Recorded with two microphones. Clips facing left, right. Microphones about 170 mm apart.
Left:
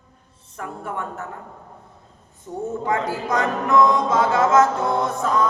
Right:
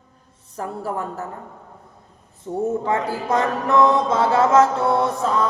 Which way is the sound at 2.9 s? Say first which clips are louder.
Right 1 dB; 30° right (ahead or behind).